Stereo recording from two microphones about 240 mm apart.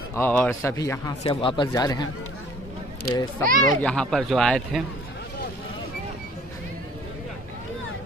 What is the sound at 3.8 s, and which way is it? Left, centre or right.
Speech, centre.